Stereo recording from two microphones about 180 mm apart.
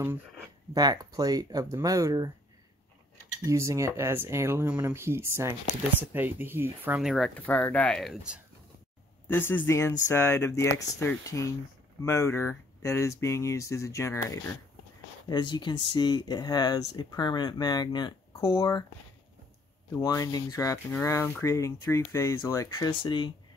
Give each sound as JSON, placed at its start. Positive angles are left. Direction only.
{"t": 0.7, "sound": "speech", "side_deg": -20}
{"t": 3.4, "sound": "speech", "side_deg": -15}
{"t": 9.3, "sound": "speech", "side_deg": 10}
{"t": 20.0, "sound": "speech", "side_deg": 20}